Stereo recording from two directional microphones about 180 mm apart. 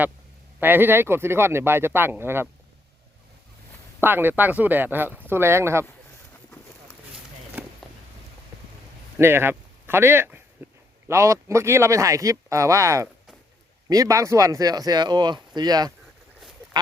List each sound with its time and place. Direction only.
0.6 s speech: 10° right (ahead or behind)
4.0 s speech: 10° right (ahead or behind)
7.6 s a sound: 10° right (ahead or behind)
9.1 s speech: 15° right (ahead or behind)
16.7 s duck: 25° right (ahead or behind)